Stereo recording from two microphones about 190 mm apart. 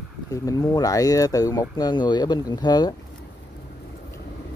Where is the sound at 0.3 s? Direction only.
20° left (ahead or behind).